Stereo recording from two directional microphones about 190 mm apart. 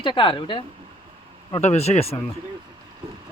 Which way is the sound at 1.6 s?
35° left (ahead or behind).